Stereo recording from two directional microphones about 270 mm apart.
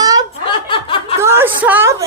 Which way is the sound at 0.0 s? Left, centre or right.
Centre.